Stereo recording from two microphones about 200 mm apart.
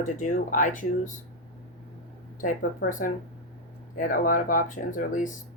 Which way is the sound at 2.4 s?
40° left (ahead or behind).